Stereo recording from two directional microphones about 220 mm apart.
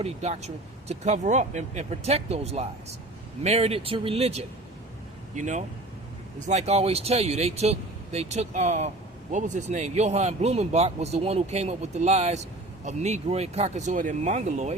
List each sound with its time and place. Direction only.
0.0 s a man's voice: 30° right (ahead or behind)